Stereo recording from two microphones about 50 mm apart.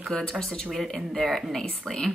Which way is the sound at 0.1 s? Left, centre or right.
Centre.